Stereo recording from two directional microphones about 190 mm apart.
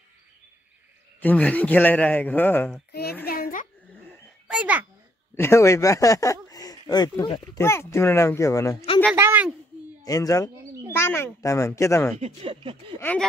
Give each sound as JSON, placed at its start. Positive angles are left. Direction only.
{"t": 1.2, "sound": "speech", "side_deg": 10}
{"t": 2.9, "sound": "a child's voice", "side_deg": 55}
{"t": 3.3, "sound": "a sound", "side_deg": 50}
{"t": 4.5, "sound": "a child's voice", "side_deg": -5}
{"t": 5.3, "sound": "speech", "side_deg": 15}
{"t": 9.1, "sound": "speech", "side_deg": -10}
{"t": 10.0, "sound": "speech", "side_deg": 20}
{"t": 10.6, "sound": "speech", "side_deg": -15}
{"t": 10.9, "sound": "speech", "side_deg": 10}
{"t": 12.2, "sound": "speech", "side_deg": -35}
{"t": 13.0, "sound": "speech", "side_deg": 5}